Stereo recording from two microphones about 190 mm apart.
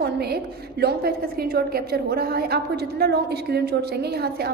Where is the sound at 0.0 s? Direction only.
55° right (ahead or behind).